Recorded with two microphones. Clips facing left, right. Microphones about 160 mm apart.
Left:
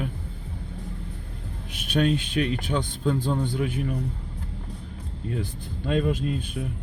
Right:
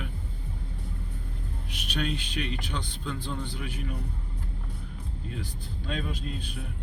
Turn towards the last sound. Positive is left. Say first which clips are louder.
# left 10 dB
turn(degrees=55)  # may be behind; listen again after turning